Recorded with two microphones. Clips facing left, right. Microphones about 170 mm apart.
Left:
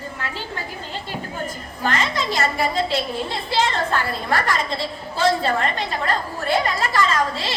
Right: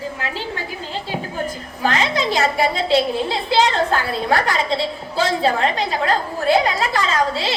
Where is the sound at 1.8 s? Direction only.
90° right.